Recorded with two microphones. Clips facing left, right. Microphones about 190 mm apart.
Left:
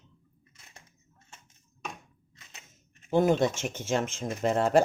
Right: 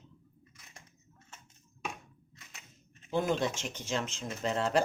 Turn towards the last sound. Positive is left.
turn(degrees=50)  # may be behind; listen again after turning